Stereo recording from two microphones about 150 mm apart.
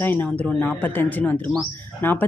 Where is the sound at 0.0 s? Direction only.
10° left (ahead or behind).